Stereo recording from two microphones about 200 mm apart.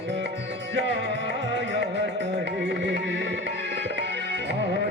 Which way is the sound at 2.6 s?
55° right (ahead or behind).